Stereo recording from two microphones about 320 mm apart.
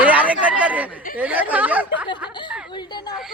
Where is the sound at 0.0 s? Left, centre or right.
Centre.